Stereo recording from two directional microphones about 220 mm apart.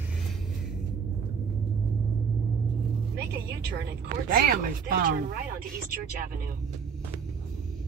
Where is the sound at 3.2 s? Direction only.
50° right (ahead or behind).